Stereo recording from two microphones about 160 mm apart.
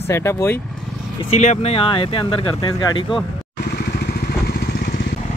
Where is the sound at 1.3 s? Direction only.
45° left (ahead or behind); by 3.1 s 30° left (ahead or behind).